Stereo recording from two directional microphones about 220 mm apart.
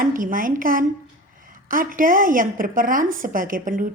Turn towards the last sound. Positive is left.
turn(degrees=-35)  # may be behind; listen again after turning